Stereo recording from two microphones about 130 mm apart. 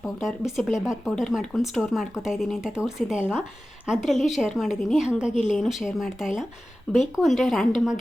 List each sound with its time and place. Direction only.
0.2 s speech: centre (ahead or behind)
5.3 s speech: 65° left (ahead or behind)
5.5 s speech: centre (ahead or behind)